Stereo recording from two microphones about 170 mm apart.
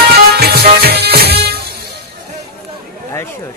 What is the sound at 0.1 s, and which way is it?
Music, 65° right (ahead or behind).